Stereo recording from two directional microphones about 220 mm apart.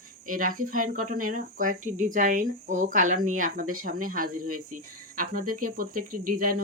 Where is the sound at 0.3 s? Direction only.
40° right (ahead or behind).